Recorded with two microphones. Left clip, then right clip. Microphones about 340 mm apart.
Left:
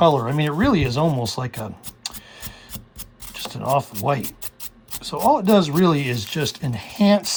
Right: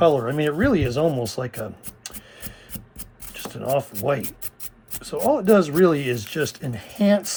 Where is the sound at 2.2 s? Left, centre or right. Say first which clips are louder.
Left 3 dB; left.